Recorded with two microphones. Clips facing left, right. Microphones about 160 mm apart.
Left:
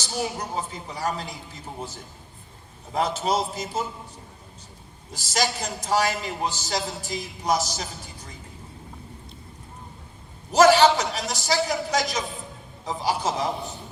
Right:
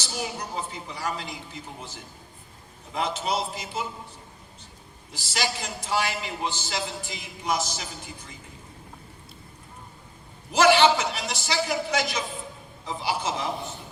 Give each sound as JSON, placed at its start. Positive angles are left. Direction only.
{"t": 0.3, "sound": "a man's voice", "side_deg": 40}
{"t": 2.9, "sound": "a man's voice", "side_deg": 40}
{"t": 5.1, "sound": "a man's voice", "side_deg": 40}
{"t": 10.5, "sound": "a sound", "side_deg": 40}
{"t": 10.9, "sound": "a man's voice", "side_deg": 40}